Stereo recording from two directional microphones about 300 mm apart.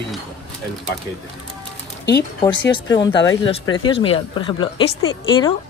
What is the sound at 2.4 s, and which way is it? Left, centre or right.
Speech, centre.